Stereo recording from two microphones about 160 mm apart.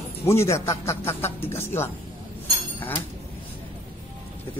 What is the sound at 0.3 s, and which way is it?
Speech, 15° left (ahead or behind).